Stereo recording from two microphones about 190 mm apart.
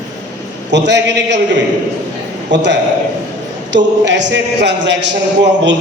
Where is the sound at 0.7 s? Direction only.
70° right (ahead or behind).